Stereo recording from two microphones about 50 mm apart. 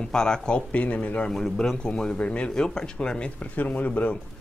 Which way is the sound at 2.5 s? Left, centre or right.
Centre.